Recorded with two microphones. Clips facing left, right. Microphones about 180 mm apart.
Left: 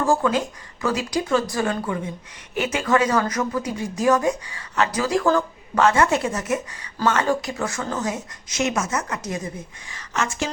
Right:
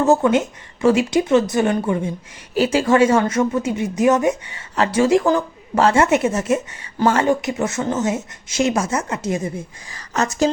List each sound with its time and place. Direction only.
0.0 s speech: 25° right (ahead or behind)
9.9 s speech: 40° right (ahead or behind)